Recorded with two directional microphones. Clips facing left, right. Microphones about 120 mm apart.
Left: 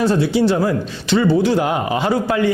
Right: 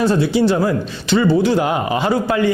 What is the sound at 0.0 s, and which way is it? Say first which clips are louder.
A man's voice: right 1 dB; 15° right (ahead or behind).